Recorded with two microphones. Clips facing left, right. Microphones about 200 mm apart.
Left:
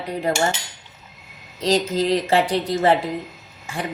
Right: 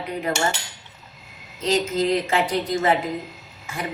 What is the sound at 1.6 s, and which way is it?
Speech, 35° left (ahead or behind).